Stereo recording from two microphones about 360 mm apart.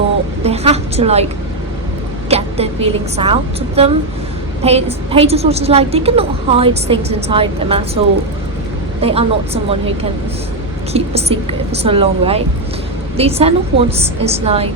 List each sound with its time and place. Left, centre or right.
0.4 s a woman's voice: centre
2.3 s a woman's voice: centre
9.0 s a woman's voice: centre
10.9 s a woman's voice: centre